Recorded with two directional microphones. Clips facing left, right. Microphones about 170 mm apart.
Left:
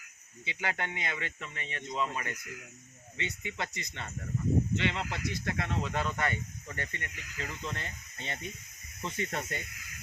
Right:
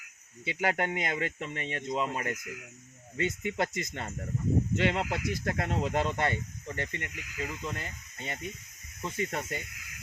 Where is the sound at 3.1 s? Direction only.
45° right (ahead or behind); by 7.1 s 20° right (ahead or behind).